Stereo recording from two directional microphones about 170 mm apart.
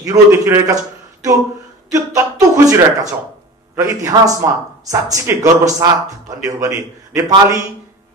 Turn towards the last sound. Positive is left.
turn(degrees=-20)  # may be behind; listen again after turning